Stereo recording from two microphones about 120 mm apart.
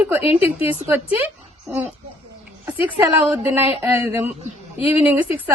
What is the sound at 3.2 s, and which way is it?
Speech, 15° right (ahead or behind).